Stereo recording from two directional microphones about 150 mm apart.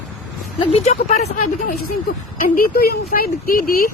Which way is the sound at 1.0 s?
80° left.